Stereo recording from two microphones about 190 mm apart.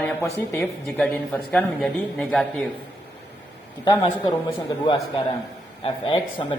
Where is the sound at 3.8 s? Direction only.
25° left (ahead or behind).